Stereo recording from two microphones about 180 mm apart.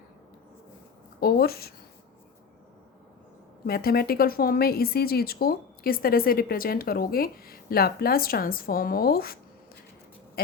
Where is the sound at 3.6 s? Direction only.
55° left (ahead or behind).